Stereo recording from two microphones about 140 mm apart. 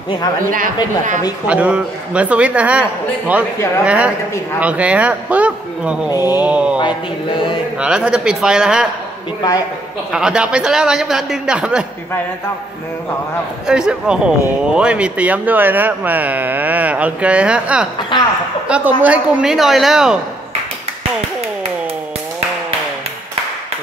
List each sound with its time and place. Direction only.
1.5 s speech: 10° right (ahead or behind)
3.8 s speech: 10° right (ahead or behind)
6.8 s mantra: 35° left (ahead or behind)
7.8 s speech: 5° right (ahead or behind)
10.1 s speech: 5° right (ahead or behind)
13.7 s speech: 5° right (ahead or behind)
18.1 s mantra: 30° left (ahead or behind)
18.7 s speech: 10° right (ahead or behind)